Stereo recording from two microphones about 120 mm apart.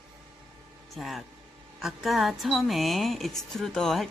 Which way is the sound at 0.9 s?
Centre (ahead or behind).